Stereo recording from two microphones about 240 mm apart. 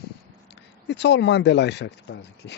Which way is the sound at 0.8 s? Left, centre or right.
Left.